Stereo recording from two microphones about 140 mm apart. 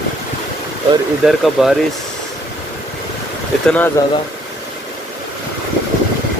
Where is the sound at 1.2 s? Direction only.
Centre (ahead or behind).